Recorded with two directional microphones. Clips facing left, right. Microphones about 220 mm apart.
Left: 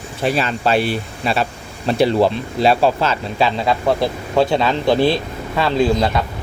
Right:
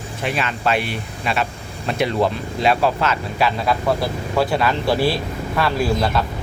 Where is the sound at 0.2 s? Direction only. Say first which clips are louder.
Left 5 dB; 35° left (ahead or behind); by 6.2 s 20° left (ahead or behind).